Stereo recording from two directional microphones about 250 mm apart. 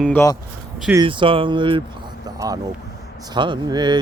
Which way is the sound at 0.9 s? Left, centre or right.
Centre.